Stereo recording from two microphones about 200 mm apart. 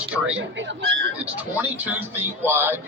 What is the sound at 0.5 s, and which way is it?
Speech, 65° right (ahead or behind).